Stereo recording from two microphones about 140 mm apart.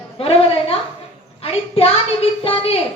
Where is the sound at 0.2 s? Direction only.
45° left (ahead or behind).